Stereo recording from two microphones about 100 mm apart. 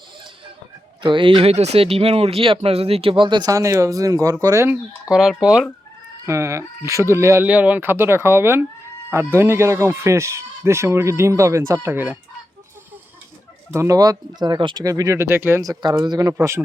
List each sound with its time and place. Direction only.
1.0 s speech: 55° right (ahead or behind)
3.5 s speech: 30° right (ahead or behind)
5.0 s speech: 5° right (ahead or behind)
6.2 s speech: 30° right (ahead or behind)
7.4 s speech: 15° right (ahead or behind)
13.7 s speech: 35° right (ahead or behind); by 14.8 s 50° right (ahead or behind)
14.8 s speech: 35° right (ahead or behind)
15.6 s speech: 40° right (ahead or behind)
16.4 s speech: 25° right (ahead or behind)